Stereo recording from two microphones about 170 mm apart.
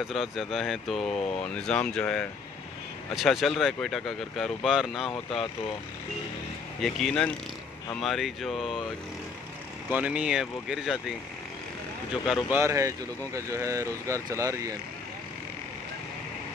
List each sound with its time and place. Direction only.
0.0 s speech: centre (ahead or behind)
6.8 s speech: centre (ahead or behind)
9.8 s speech: 10° right (ahead or behind)
12.4 s speech: 15° right (ahead or behind)